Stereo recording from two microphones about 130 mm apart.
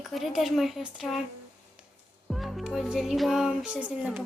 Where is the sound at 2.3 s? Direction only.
Centre (ahead or behind).